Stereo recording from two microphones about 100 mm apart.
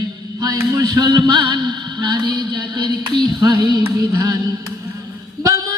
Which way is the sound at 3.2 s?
40° right (ahead or behind).